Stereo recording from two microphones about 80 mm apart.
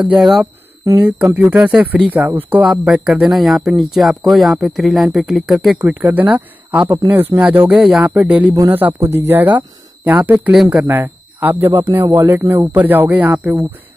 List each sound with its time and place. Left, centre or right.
0.2 s speech: centre
0.9 s speech: centre
2.6 s speech: centre
5.8 s speech: right
7.7 s speech: centre
8.2 s speech: centre
10.5 s speech: centre
10.8 s speech: right